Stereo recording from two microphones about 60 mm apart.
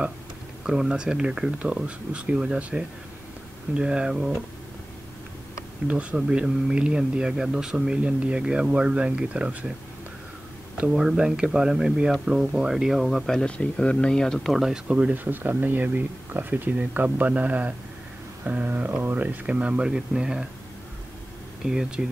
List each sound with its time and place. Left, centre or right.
0.7 s speech: centre
5.9 s speech: right
6.1 s speech: centre
11.0 s speech: centre
13.4 s speech: centre
14.6 s speech: centre
15.1 s speech: right; by 20.4 s centre
21.6 s speech: centre